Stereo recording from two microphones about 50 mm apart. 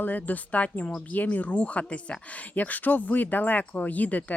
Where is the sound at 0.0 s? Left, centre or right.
Left.